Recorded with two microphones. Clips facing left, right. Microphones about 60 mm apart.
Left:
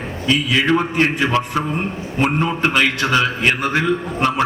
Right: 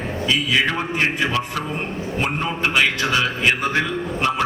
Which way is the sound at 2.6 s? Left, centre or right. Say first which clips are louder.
Left 1 dB; left.